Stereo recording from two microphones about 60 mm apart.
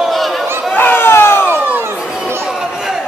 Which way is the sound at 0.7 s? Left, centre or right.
Left.